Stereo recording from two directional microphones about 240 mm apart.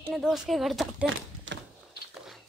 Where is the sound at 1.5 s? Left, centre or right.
Right.